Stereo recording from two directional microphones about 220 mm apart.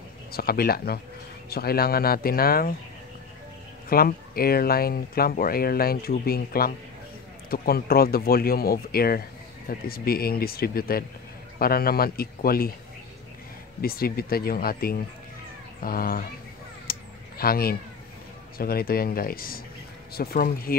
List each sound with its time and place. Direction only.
0.3 s speech: 45° left (ahead or behind)
3.9 s speech: 45° left (ahead or behind)
13.7 s speech: 45° left (ahead or behind)
16.9 s a sound: 40° left (ahead or behind)
17.4 s speech: 45° left (ahead or behind)